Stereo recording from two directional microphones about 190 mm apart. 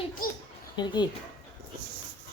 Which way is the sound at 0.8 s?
25° left (ahead or behind).